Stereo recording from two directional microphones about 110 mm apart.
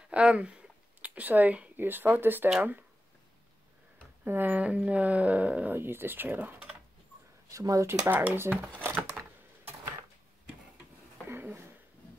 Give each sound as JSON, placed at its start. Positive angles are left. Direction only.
{"t": 0.1, "sound": "speech", "side_deg": -10}
{"t": 4.2, "sound": "speech", "side_deg": -15}
{"t": 7.4, "sound": "speech", "side_deg": -30}
{"t": 8.1, "sound": "speech", "side_deg": -15}
{"t": 11.2, "sound": "a sound", "side_deg": -20}